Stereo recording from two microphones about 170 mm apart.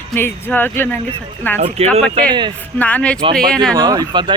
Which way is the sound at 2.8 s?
10° left (ahead or behind).